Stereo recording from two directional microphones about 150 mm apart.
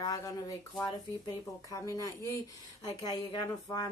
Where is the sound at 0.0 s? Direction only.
25° left (ahead or behind).